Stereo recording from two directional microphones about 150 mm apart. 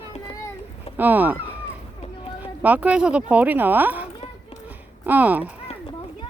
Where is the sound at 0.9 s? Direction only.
10° right (ahead or behind).